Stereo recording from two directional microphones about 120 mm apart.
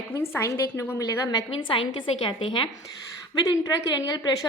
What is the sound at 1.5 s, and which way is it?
A woman's voice, 45° left (ahead or behind).